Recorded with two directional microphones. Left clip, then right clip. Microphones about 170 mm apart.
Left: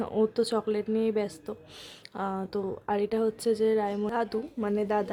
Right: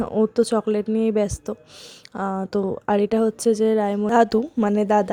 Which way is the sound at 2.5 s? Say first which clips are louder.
Right 8 dB; 40° right (ahead or behind).